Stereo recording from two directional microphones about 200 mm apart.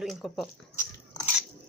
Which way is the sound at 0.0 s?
Centre (ahead or behind).